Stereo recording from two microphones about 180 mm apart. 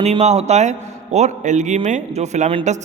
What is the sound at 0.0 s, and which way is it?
A man's voice, 35° right (ahead or behind).